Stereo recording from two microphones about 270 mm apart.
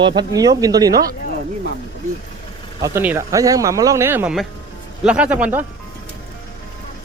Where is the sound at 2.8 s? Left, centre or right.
Centre.